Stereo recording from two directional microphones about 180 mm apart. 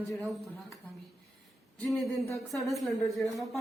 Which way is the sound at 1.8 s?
Centre (ahead or behind).